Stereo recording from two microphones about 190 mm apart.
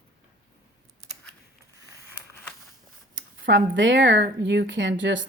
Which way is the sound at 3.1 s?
80° right.